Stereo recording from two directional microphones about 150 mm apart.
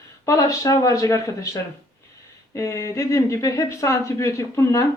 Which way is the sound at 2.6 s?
20° left (ahead or behind).